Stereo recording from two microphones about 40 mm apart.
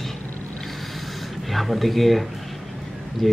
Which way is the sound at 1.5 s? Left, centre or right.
Centre.